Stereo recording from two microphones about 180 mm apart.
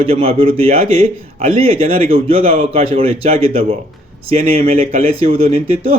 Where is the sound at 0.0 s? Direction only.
30° right (ahead or behind).